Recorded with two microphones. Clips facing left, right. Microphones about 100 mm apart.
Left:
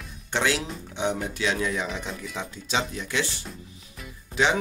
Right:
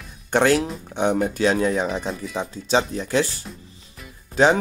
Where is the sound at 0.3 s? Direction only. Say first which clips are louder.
Right 8 dB; 50° right (ahead or behind).